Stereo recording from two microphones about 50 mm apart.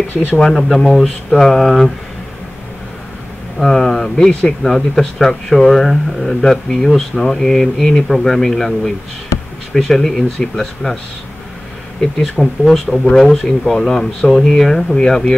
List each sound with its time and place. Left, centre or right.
0.4 s speech: centre
3.5 s speech: centre
4.3 s speech: left
4.6 s speech: centre
12.0 s speech: centre
15.0 s speech: centre